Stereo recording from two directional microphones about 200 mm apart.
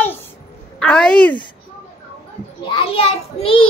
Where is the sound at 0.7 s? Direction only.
5° left (ahead or behind).